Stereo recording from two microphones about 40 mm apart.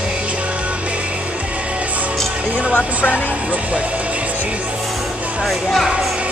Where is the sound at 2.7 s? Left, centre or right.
Left.